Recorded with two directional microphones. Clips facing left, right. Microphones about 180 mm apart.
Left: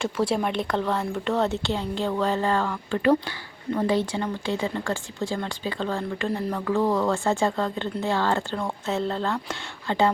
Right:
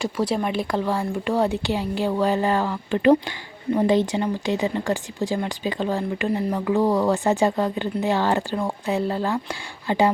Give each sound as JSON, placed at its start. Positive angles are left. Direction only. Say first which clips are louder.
{"t": 0.3, "sound": "speech", "louder": "right 2 dB", "side_deg": -5}